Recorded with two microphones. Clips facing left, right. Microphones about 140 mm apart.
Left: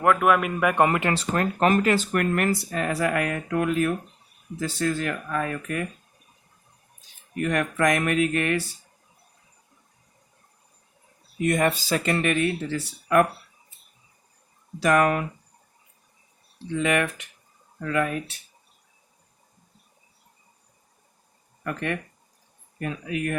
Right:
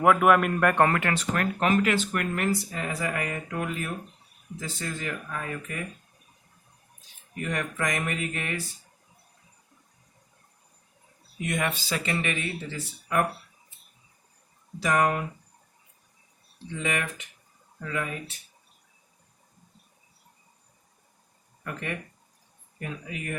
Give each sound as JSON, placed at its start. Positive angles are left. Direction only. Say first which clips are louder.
{"t": 0.0, "sound": "a man's voice", "louder": "even", "side_deg": 0}
{"t": 0.9, "sound": "speech", "louder": "left 2 dB", "side_deg": 20}
{"t": 2.1, "sound": "speech", "louder": "left 4 dB", "side_deg": 60}
{"t": 7.3, "sound": "speech", "louder": "left 6 dB", "side_deg": 65}
{"t": 11.3, "sound": "speech", "louder": "left 7 dB", "side_deg": 45}
{"t": 12.1, "sound": "speech", "louder": "left 7 dB", "side_deg": 60}
{"t": 14.8, "sound": "speech", "louder": "left 4 dB", "side_deg": 65}
{"t": 16.8, "sound": "speech", "louder": "left 6 dB", "side_deg": 65}
{"t": 21.6, "sound": "speech", "louder": "left 6 dB", "side_deg": 65}